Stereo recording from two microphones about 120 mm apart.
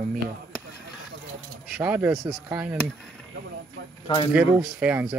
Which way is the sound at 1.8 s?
15° right (ahead or behind).